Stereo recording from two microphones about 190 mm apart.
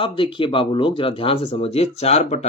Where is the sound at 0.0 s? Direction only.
25° left (ahead or behind).